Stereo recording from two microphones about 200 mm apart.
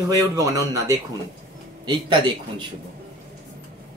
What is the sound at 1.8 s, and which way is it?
Speech, 20° right (ahead or behind).